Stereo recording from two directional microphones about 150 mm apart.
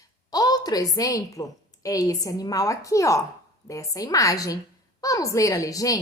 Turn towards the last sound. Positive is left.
turn(degrees=20)  # may be behind; listen again after turning